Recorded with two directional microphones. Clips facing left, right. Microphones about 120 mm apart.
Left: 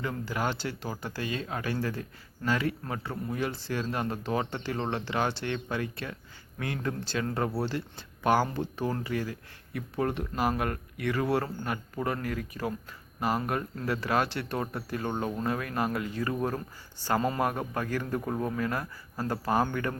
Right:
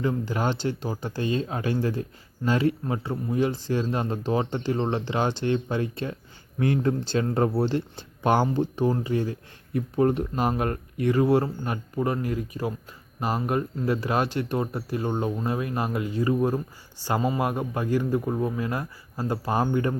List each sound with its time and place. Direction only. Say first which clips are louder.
0.0 s speech: right 5 dB; 20° right (ahead or behind)